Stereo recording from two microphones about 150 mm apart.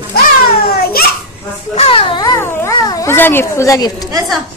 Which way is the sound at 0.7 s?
90° left.